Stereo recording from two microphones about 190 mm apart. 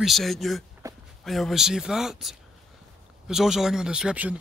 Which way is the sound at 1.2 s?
Centre (ahead or behind).